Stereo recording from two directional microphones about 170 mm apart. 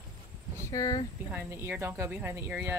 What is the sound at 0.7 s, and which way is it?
Speech, 20° left (ahead or behind).